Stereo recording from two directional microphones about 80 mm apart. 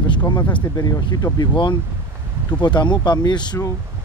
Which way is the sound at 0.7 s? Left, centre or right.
Left.